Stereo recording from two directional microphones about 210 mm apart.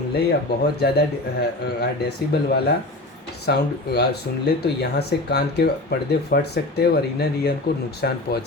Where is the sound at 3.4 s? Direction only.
50° left (ahead or behind).